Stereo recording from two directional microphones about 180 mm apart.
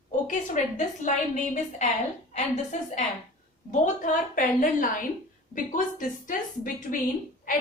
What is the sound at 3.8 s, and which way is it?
A woman's voice, 45° left (ahead or behind).